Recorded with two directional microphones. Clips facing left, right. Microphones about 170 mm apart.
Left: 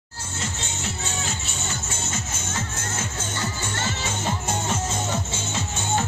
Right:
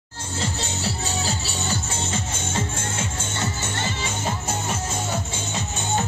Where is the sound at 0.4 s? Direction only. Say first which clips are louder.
Right 4 dB; 35° right (ahead or behind).